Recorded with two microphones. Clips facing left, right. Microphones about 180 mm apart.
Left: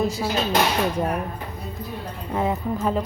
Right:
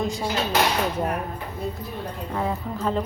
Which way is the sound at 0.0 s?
5° left (ahead or behind).